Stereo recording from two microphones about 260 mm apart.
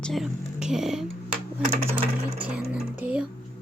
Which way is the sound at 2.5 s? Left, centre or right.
Centre.